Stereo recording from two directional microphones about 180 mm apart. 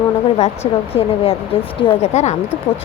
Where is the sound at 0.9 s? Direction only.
35° left (ahead or behind).